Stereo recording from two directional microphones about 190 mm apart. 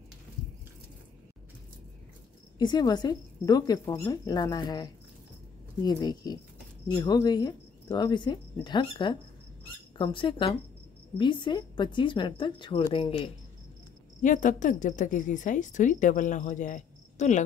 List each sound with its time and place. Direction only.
2.6 s a woman's voice: 20° left (ahead or behind)
14.2 s a woman's voice: 40° left (ahead or behind)